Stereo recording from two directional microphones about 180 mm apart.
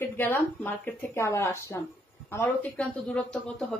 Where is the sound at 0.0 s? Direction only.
10° left (ahead or behind).